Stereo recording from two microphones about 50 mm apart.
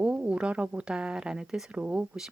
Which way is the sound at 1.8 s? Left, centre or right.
Right.